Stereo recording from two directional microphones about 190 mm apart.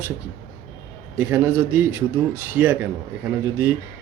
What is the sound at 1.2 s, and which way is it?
Speech, 10° right (ahead or behind).